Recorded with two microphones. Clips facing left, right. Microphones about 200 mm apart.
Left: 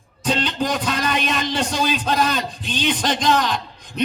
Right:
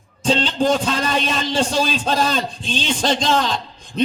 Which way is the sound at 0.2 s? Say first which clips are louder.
Right 3 dB; 30° right (ahead or behind).